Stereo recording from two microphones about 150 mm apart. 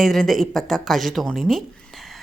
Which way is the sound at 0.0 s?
Centre (ahead or behind).